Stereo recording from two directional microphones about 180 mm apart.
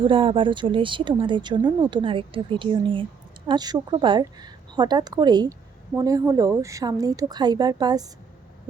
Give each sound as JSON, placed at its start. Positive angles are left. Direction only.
{"t": 0.0, "sound": "speech", "side_deg": -30}